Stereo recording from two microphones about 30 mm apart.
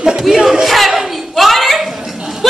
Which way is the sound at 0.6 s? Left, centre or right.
Centre.